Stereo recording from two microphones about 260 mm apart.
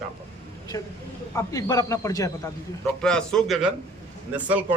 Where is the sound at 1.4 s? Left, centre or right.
Centre.